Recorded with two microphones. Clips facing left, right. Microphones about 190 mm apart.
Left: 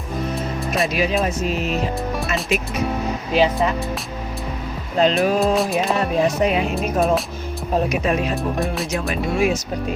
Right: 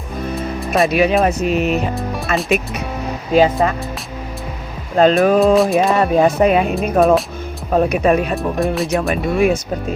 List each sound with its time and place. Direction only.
0.9 s speech: 60° right (ahead or behind)
2.0 s music: centre (ahead or behind)
3.3 s speech: 45° right (ahead or behind)
4.9 s speech: 50° right (ahead or behind)
5.5 s speech: centre (ahead or behind)
5.8 s speech: 55° right (ahead or behind)
8.4 s speech: centre (ahead or behind)
8.9 s speech: 55° right (ahead or behind)